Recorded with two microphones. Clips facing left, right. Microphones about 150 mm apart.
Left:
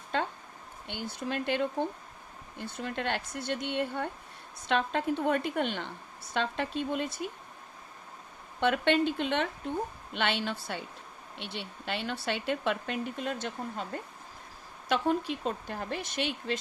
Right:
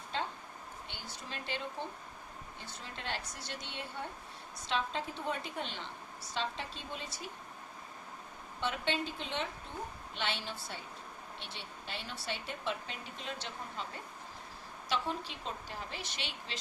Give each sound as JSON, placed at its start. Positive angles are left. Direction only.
{"t": 0.1, "sound": "a sound", "side_deg": 55}
{"t": 0.9, "sound": "speech", "side_deg": 55}
{"t": 8.6, "sound": "speech", "side_deg": 65}